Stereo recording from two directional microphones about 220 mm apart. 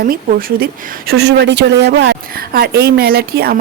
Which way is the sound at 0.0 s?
40° right (ahead or behind).